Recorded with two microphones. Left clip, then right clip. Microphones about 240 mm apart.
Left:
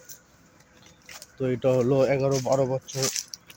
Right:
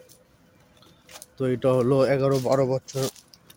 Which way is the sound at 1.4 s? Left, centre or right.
Centre.